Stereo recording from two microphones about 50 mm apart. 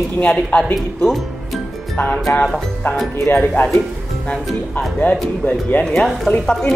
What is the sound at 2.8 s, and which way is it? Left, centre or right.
Speech, left.